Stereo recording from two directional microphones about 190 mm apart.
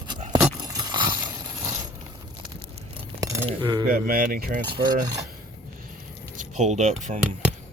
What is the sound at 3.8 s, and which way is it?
Speech, 50° right (ahead or behind).